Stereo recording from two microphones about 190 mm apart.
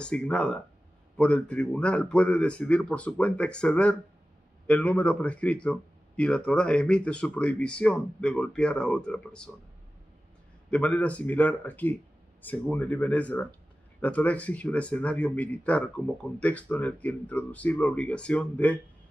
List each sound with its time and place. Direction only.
0.0 s speech: 5° left (ahead or behind)
10.7 s speech: 5° left (ahead or behind)